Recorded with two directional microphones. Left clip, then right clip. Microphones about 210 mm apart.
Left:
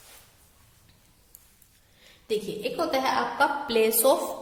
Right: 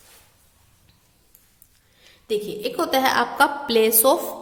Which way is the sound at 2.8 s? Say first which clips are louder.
Right 6 dB; 35° right (ahead or behind).